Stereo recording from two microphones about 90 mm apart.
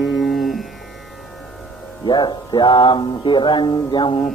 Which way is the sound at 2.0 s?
55° left (ahead or behind).